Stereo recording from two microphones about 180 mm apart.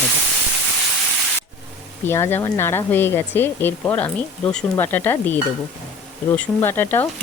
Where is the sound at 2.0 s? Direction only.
15° left (ahead or behind).